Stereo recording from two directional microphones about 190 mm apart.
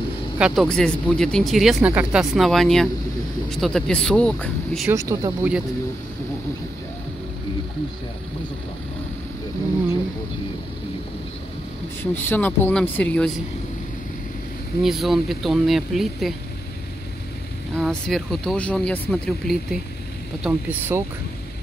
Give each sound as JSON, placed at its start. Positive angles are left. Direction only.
{"t": 0.4, "sound": "speech", "side_deg": 0}
{"t": 4.9, "sound": "speech", "side_deg": -15}
{"t": 12.0, "sound": "speech", "side_deg": 10}
{"t": 14.8, "sound": "speech", "side_deg": 0}
{"t": 17.7, "sound": "speech", "side_deg": 0}
{"t": 20.4, "sound": "speech", "side_deg": -10}